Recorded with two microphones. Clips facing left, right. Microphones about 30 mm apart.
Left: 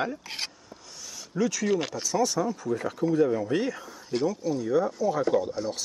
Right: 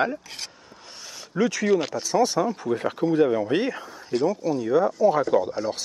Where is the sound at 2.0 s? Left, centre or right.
Right.